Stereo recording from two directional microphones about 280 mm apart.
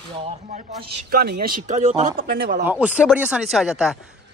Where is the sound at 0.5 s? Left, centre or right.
Right.